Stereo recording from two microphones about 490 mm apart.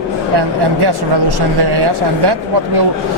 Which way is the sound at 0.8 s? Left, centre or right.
Right.